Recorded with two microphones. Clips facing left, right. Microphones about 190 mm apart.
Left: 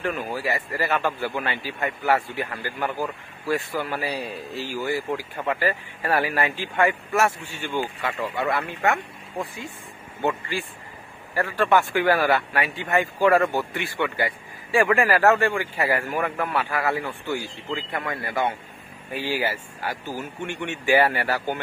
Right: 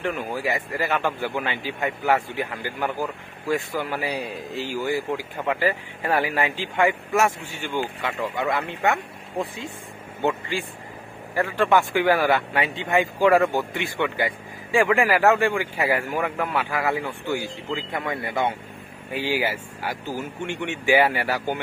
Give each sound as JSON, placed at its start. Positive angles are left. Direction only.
{"t": 0.0, "sound": "a man's voice", "side_deg": -15}
{"t": 8.8, "sound": "speech", "side_deg": 0}
{"t": 11.3, "sound": "a man's voice", "side_deg": -15}